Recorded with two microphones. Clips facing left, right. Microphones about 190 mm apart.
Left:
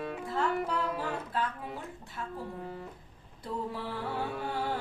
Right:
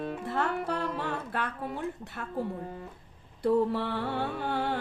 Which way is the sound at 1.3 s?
70° right (ahead or behind).